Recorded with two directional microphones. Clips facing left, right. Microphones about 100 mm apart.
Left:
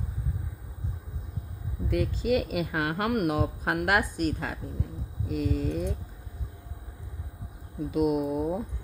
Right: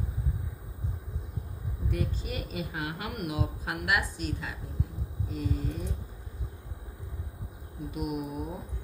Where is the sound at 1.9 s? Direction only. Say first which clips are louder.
Left 8 dB; 90° left; by 4.5 s 50° left (ahead or behind).